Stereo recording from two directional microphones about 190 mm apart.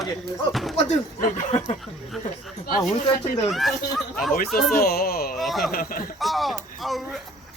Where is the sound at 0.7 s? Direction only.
35° left (ahead or behind).